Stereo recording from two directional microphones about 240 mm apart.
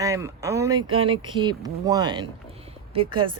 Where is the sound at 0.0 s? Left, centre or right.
Centre.